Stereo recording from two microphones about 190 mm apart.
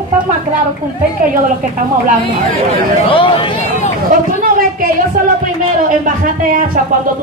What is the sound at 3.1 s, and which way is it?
Speech, 25° left (ahead or behind).